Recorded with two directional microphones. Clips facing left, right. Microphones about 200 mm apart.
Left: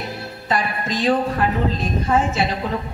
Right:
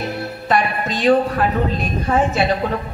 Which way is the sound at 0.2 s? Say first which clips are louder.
Right 4 dB; 65° right (ahead or behind).